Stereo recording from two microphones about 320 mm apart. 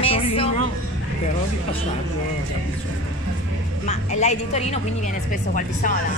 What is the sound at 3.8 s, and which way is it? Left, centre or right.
Speech, left.